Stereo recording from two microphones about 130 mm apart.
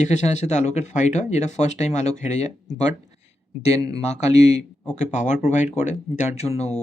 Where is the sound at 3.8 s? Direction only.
30° right (ahead or behind).